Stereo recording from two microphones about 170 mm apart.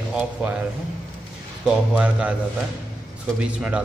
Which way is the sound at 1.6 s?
5° right (ahead or behind).